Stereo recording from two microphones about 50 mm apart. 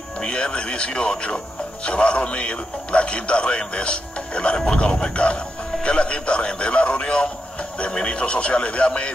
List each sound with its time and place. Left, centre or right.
0.2 s a man's voice: centre